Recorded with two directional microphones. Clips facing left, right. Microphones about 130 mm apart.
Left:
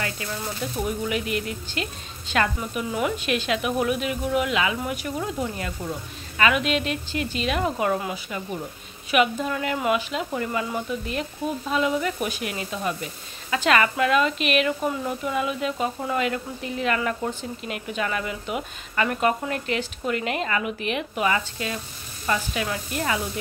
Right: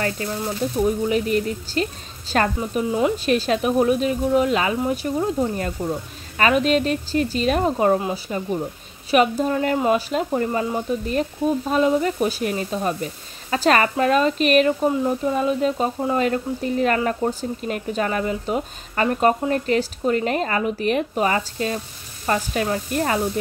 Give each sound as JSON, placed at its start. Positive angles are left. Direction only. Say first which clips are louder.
{"t": 0.0, "sound": "speech", "louder": "right 6 dB", "side_deg": -35}